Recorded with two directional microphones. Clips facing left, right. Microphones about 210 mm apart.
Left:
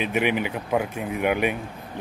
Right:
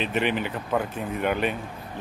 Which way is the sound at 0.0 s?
10° left (ahead or behind).